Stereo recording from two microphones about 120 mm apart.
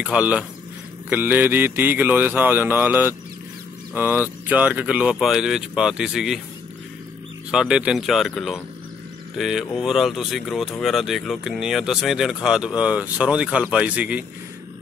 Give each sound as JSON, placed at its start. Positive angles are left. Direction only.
{"t": 0.0, "sound": "speech", "side_deg": -10}
{"t": 7.5, "sound": "speech", "side_deg": -5}